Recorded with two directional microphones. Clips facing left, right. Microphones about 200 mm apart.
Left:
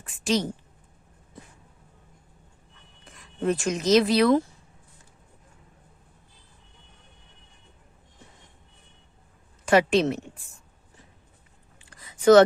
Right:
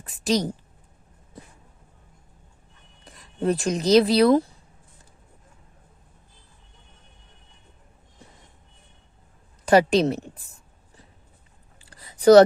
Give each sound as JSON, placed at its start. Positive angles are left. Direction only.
{"t": 0.0, "sound": "a woman's voice", "side_deg": -35}
{"t": 3.0, "sound": "speech", "side_deg": -35}
{"t": 9.6, "sound": "a woman's voice", "side_deg": -35}
{"t": 11.8, "sound": "a sound", "side_deg": -35}